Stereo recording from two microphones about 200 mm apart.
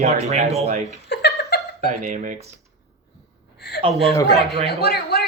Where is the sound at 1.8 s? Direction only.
40° right (ahead or behind).